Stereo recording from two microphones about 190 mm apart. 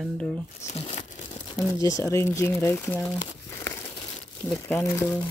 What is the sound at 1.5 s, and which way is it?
Speech, 15° left (ahead or behind).